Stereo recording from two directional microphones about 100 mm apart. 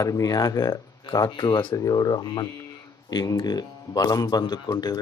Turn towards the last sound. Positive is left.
turn(degrees=40)  # may be behind; listen again after turning